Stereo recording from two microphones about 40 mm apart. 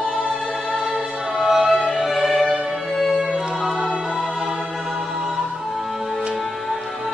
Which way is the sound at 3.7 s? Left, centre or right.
Right.